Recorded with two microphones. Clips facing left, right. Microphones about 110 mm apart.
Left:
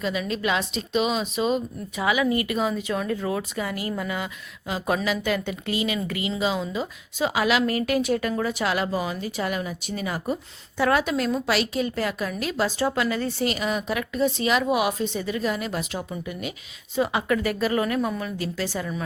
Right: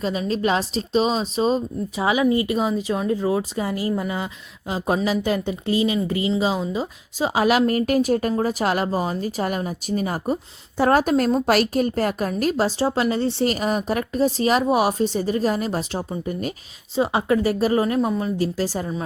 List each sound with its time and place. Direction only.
0.0 s a woman's voice: 35° right (ahead or behind)
13.5 s a woman's voice: 40° right (ahead or behind)
17.0 s a woman's voice: 30° right (ahead or behind)